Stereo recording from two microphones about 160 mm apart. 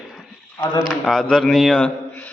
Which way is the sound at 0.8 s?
Centre (ahead or behind).